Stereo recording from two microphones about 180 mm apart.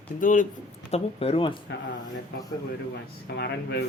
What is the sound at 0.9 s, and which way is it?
Speech, 35° left (ahead or behind).